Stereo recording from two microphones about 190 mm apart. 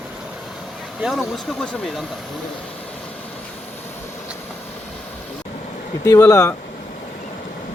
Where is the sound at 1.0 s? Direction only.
Centre (ahead or behind).